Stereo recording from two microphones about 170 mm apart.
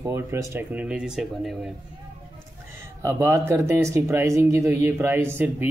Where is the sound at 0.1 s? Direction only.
15° right (ahead or behind).